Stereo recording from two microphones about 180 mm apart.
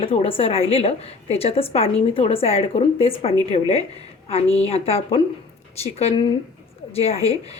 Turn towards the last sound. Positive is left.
turn(degrees=35)  # may be behind; listen again after turning